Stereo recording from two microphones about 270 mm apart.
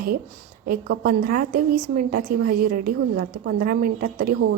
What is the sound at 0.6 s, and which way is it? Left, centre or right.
A woman's voice, right.